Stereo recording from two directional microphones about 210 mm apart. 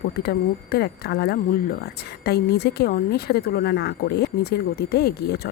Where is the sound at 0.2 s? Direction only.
50° left (ahead or behind).